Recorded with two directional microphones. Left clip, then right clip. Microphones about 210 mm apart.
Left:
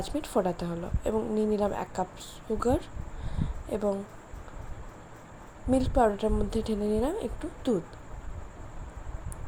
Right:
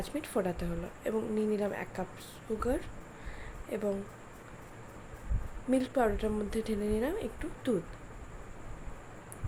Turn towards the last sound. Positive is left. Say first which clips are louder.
# left 4 dB
turn(degrees=10)  # may be behind; listen again after turning